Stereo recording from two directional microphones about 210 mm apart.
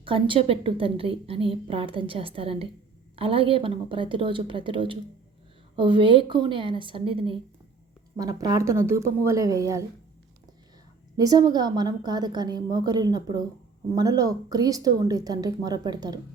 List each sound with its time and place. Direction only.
0.0 s a woman's voice: 25° right (ahead or behind)
11.2 s a woman's voice: 20° right (ahead or behind)